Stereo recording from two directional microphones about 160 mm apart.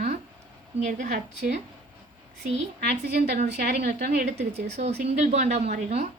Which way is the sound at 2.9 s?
45° right (ahead or behind).